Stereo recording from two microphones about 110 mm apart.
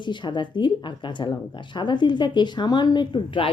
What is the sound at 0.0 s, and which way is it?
Speech, 45° left (ahead or behind).